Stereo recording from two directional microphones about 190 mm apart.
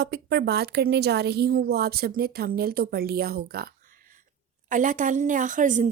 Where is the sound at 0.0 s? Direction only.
60° right (ahead or behind).